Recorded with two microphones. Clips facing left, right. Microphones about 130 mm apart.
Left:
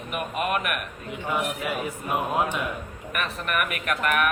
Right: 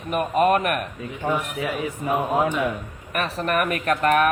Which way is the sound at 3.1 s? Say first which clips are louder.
Right 5 dB; 35° right (ahead or behind).